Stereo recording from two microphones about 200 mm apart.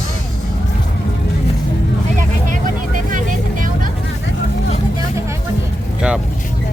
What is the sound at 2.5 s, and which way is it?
Vehicle, 40° right (ahead or behind).